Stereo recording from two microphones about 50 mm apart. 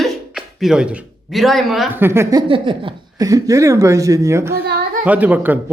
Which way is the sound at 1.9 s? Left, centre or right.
Right.